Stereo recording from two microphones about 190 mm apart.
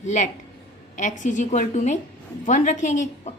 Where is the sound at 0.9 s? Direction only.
40° left (ahead or behind).